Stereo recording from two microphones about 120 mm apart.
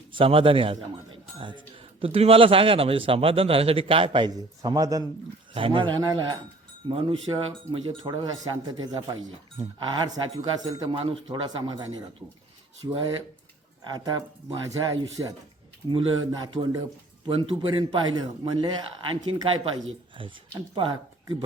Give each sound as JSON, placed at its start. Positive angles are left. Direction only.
{"t": 0.1, "sound": "a man's voice", "side_deg": -45}
{"t": 5.5, "sound": "a man's voice", "side_deg": -45}
{"t": 6.0, "sound": "a man's voice", "side_deg": -35}
{"t": 8.2, "sound": "speech", "side_deg": -35}
{"t": 10.9, "sound": "a man's voice", "side_deg": -50}
{"t": 11.4, "sound": "speech", "side_deg": -35}
{"t": 12.9, "sound": "a man's voice", "side_deg": -35}